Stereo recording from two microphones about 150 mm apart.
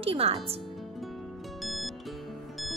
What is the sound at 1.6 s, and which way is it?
Music, centre (ahead or behind).